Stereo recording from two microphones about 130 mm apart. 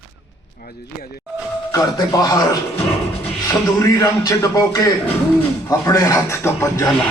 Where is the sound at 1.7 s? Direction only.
25° left (ahead or behind).